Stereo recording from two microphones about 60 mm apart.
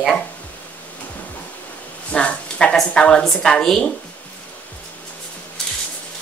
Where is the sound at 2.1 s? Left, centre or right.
Centre.